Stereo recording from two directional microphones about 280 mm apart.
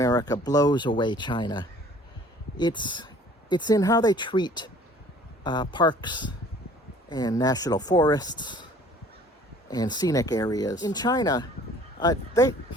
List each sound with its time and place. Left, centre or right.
0.0 s speech: centre
9.6 s speech: centre